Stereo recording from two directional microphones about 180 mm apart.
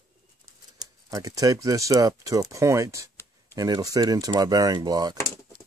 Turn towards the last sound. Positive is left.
turn(degrees=-20)  # may be behind; listen again after turning